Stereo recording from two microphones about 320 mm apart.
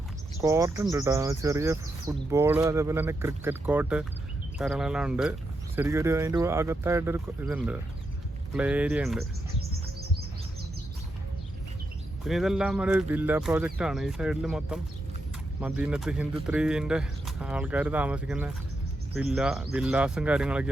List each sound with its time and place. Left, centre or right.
0.4 s speech: centre
9.6 s chirp: right
12.2 s speech: centre